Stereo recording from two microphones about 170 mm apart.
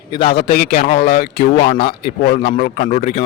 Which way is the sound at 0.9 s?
65° left (ahead or behind).